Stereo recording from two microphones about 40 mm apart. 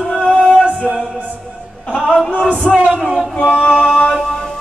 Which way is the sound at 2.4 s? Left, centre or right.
Left.